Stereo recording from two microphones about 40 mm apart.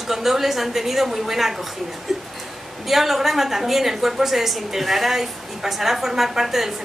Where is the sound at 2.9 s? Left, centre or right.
Centre.